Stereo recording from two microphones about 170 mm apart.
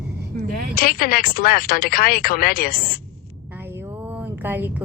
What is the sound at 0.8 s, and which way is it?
Speech, 60° left (ahead or behind).